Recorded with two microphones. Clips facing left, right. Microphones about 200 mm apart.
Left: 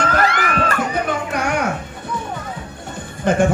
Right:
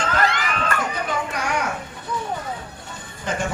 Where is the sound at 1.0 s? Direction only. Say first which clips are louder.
Left 4 dB; 55° left (ahead or behind).